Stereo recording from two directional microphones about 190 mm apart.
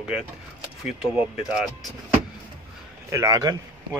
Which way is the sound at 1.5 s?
Centre (ahead or behind).